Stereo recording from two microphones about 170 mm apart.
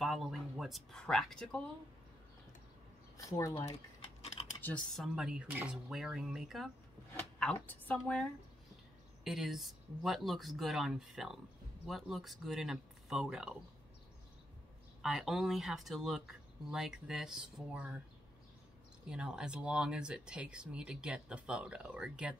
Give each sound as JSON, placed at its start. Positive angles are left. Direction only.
{"t": 0.0, "sound": "a sound", "side_deg": 0}
{"t": 3.3, "sound": "speech", "side_deg": 20}
{"t": 4.6, "sound": "speech", "side_deg": 10}
{"t": 15.0, "sound": "speech", "side_deg": 0}
{"t": 19.0, "sound": "speech", "side_deg": -5}